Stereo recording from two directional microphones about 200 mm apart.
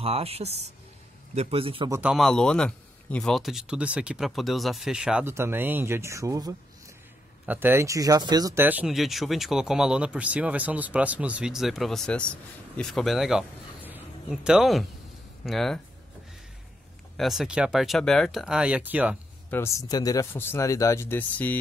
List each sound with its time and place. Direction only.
0.0 s speech: 30° right (ahead or behind)
1.9 s speech: 5° right (ahead or behind)
13.8 s a sound: 5° right (ahead or behind)
15.4 s speech: centre (ahead or behind)
17.2 s speech: centre (ahead or behind)
19.5 s speech: 15° left (ahead or behind)